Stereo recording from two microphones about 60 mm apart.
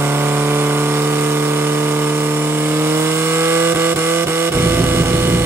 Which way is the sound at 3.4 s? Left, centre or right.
Right.